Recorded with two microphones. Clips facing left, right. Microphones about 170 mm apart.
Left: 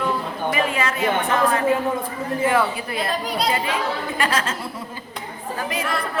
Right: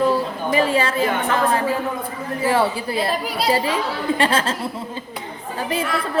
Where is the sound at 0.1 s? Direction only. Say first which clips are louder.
Right 4 dB; 30° right (ahead or behind).